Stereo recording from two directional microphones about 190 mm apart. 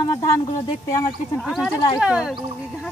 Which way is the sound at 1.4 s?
Centre (ahead or behind).